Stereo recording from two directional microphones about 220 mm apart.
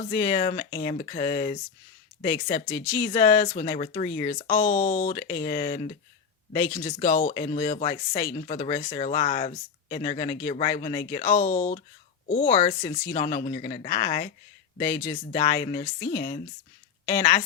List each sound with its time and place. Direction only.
0.1 s speech: 20° left (ahead or behind)
2.7 s speech: 10° left (ahead or behind)
3.0 s speech: 25° left (ahead or behind)
4.6 s speech: 40° left (ahead or behind)
5.1 s speech: 20° left (ahead or behind)
7.1 s speech: 30° left (ahead or behind)
11.4 s speech: 35° left (ahead or behind)
14.8 s speech: 15° left (ahead or behind)